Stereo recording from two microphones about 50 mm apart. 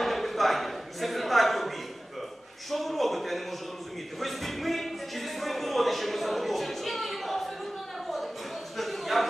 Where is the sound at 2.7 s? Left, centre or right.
Centre.